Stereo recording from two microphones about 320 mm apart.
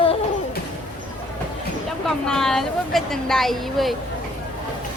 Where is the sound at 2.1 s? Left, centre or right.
Centre.